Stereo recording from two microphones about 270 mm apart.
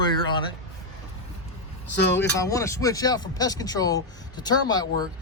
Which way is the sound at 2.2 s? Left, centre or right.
Centre.